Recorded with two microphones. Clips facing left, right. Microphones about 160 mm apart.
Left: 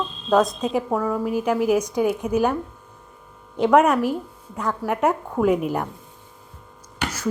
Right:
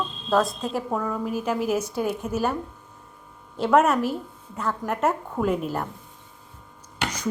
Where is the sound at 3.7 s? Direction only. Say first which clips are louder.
Left 2 dB; 10° left (ahead or behind).